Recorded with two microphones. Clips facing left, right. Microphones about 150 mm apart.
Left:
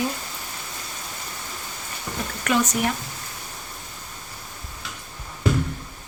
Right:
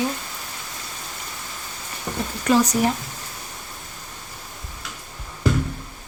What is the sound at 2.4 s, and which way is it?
Speech, 35° right (ahead or behind).